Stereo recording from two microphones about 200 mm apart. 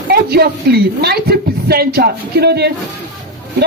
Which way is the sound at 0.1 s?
50° right (ahead or behind).